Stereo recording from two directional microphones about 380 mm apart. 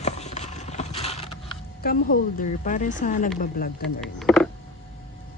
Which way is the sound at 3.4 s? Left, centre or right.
Left.